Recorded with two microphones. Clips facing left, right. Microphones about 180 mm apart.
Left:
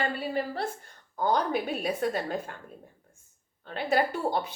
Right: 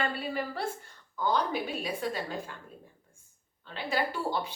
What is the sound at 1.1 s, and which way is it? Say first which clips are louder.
Speech: left 3 dB; 50° left (ahead or behind).